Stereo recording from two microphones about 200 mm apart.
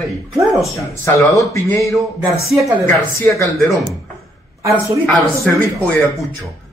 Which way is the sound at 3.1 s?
15° left (ahead or behind).